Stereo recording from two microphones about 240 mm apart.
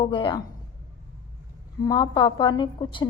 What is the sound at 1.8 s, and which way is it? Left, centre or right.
A woman's voice, centre.